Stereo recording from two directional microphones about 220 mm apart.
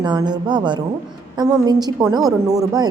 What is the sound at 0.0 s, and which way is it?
A woman's voice, 20° right (ahead or behind).